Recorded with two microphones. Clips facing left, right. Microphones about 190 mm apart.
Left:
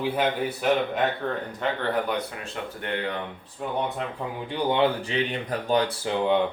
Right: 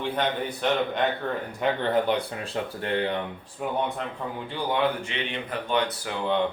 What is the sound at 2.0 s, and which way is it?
Speech, 30° right (ahead or behind).